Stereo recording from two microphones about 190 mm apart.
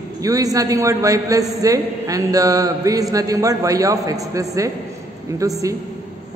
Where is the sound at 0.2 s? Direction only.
20° right (ahead or behind).